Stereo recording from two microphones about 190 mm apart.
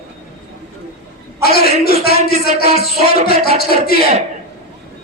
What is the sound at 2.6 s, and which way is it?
Music, 35° right (ahead or behind).